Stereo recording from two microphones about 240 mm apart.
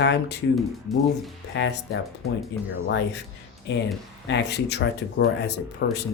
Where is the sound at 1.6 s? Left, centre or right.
Left.